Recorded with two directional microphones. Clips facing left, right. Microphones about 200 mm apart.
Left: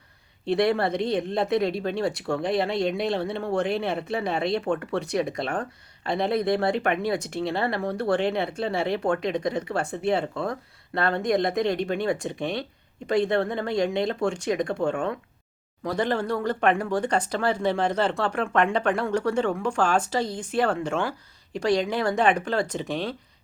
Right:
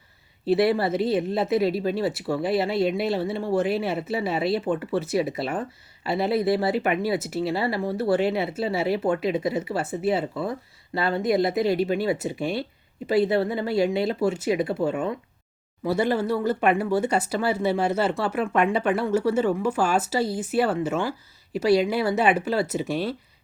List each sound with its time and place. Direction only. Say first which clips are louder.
0.4 s speech: right 2 dB; 5° right (ahead or behind)